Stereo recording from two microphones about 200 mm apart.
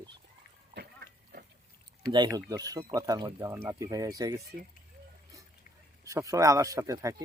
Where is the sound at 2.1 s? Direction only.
20° right (ahead or behind).